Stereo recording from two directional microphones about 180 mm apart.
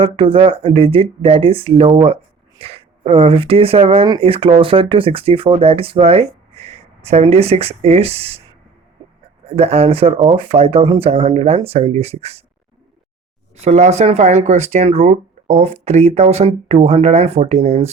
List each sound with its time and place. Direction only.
0.0 s speech: 30° right (ahead or behind)
9.6 s speech: 35° right (ahead or behind)
13.6 s speech: 40° right (ahead or behind)